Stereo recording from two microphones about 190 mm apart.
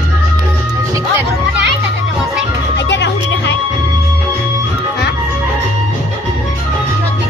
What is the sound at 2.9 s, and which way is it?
Music, 70° left (ahead or behind).